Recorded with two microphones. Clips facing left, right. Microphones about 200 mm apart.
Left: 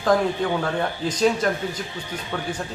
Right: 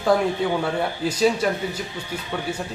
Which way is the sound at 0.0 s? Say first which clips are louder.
Even; 10° right (ahead or behind).